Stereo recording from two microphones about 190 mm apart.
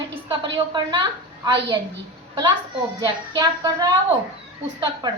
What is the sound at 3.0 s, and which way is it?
A woman's voice, 20° right (ahead or behind).